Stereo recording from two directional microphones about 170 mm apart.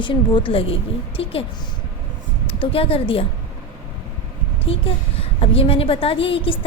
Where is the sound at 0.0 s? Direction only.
30° left (ahead or behind).